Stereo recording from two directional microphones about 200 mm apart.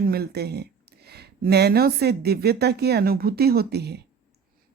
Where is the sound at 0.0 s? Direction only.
50° right (ahead or behind).